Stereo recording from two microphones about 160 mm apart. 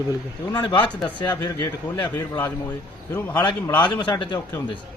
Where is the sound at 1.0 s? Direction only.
10° left (ahead or behind).